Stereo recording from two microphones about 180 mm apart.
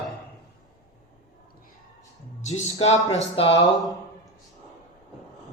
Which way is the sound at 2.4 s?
40° left (ahead or behind).